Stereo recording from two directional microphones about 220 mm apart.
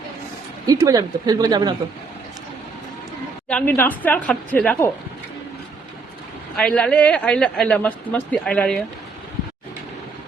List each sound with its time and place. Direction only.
0.7 s speech: 15° right (ahead or behind)
3.5 s a woman's voice: 10° left (ahead or behind)
6.6 s speech: 5° left (ahead or behind)